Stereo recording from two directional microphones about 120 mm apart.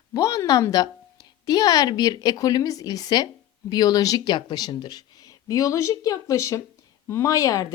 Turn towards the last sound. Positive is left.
turn(degrees=25)  # may be behind; listen again after turning